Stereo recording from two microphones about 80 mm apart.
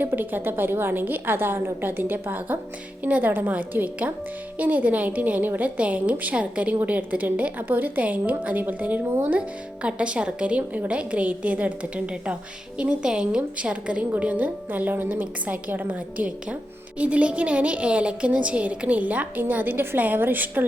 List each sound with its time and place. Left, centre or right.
0.0 s a woman's voice: right